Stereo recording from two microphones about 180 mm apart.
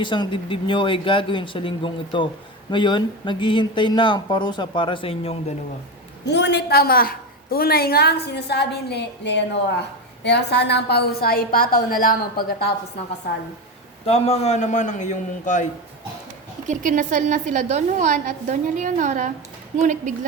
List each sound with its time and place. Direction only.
0.0 s speech: 25° left (ahead or behind)
6.2 s a woman's voice: 75° left (ahead or behind); by 12.1 s 50° left (ahead or behind)
14.0 s a man's voice: 35° left (ahead or behind)
16.6 s a woman's voice: 45° right (ahead or behind)